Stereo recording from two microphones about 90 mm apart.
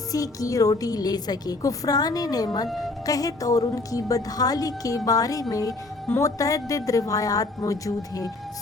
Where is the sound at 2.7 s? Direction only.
Centre (ahead or behind).